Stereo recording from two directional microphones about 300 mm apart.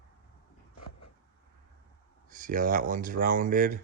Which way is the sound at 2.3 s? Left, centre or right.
Right.